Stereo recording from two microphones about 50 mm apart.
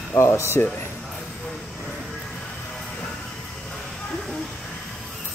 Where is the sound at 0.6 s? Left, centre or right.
Left.